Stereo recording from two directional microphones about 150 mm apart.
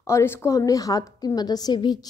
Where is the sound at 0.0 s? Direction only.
15° left (ahead or behind).